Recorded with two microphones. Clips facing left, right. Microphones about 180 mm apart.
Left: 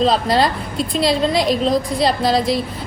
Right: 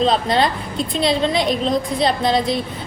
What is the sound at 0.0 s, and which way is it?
A woman's voice, centre (ahead or behind).